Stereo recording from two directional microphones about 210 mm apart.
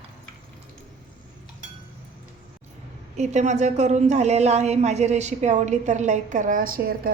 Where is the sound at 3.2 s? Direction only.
35° right (ahead or behind).